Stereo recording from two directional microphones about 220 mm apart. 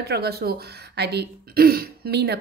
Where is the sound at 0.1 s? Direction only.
45° right (ahead or behind).